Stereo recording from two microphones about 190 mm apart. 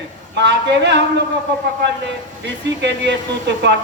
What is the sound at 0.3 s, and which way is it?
Speech, 65° right (ahead or behind).